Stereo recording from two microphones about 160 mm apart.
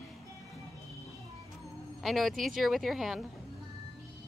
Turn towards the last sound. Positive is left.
turn(degrees=0)  # may be behind; listen again after turning